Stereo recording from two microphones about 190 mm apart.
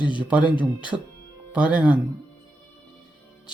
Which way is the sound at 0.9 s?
5° right (ahead or behind).